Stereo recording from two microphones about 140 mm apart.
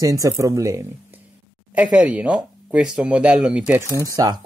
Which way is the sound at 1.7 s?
10° right (ahead or behind).